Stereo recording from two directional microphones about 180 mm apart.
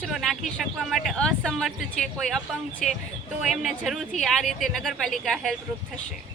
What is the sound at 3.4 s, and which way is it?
Speech, centre (ahead or behind).